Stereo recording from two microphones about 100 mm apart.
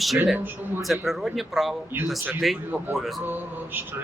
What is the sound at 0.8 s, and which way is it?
Speech, centre (ahead or behind).